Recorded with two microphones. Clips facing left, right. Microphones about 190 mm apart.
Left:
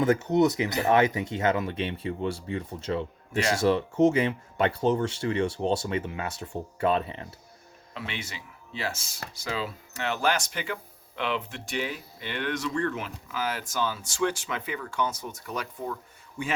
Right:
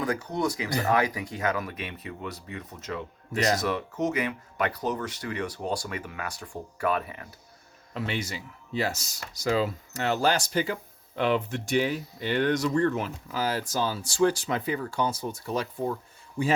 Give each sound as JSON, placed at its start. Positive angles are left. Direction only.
{"t": 0.0, "sound": "speech", "side_deg": 25}
{"t": 3.3, "sound": "speech", "side_deg": -40}
{"t": 3.6, "sound": "speech", "side_deg": 30}
{"t": 7.9, "sound": "speech", "side_deg": -40}